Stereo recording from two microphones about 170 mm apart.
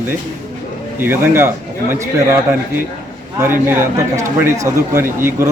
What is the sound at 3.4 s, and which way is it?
Speech, 15° right (ahead or behind).